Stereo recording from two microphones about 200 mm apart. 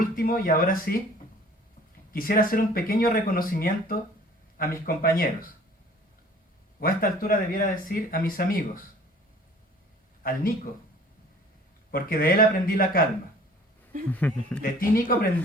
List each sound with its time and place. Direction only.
0.0 s speech: 45° left (ahead or behind)
2.1 s speech: 45° left (ahead or behind)
6.7 s speech: 45° left (ahead or behind)
10.2 s speech: 45° left (ahead or behind)
11.9 s speech: 45° left (ahead or behind)
14.1 s a man's voice: 10° left (ahead or behind)
14.6 s speech: 45° left (ahead or behind)